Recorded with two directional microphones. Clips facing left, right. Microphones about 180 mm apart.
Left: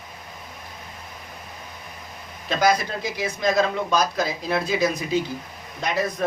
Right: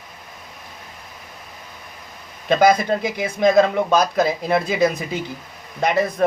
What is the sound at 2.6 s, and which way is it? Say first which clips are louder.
A man's voice: right 5 dB; 55° right (ahead or behind).